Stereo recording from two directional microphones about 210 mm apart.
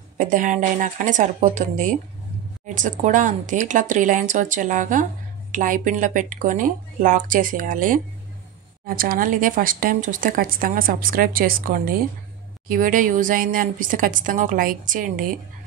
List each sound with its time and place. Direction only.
0.2 s speech: 40° right (ahead or behind)